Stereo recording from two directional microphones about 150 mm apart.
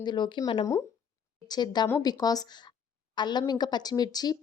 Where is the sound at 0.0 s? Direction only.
30° left (ahead or behind).